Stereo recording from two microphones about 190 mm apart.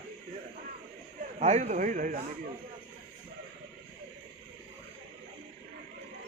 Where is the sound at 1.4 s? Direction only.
35° right (ahead or behind).